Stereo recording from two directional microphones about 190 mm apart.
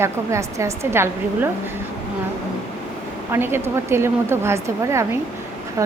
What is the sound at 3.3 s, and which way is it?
Speech, 10° right (ahead or behind).